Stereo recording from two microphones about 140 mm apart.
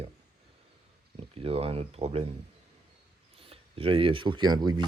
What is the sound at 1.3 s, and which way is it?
Speech, 45° right (ahead or behind).